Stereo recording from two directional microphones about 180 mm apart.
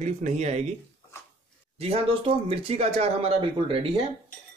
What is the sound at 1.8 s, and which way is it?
A man's voice, 30° right (ahead or behind).